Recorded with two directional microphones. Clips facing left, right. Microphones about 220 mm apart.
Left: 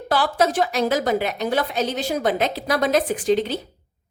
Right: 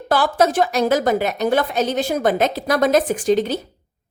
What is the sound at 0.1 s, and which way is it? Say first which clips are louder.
A woman's voice: right 3 dB; 45° right (ahead or behind).